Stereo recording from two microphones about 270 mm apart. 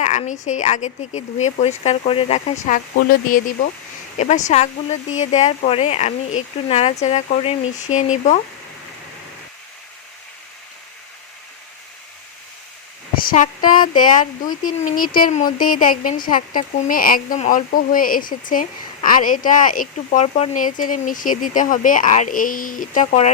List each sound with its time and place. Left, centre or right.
0.0 s speech: left
13.2 s speech: left
13.7 s speech: centre
14.6 s speech: left